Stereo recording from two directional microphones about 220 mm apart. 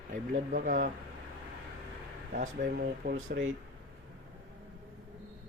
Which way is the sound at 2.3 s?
35° right (ahead or behind).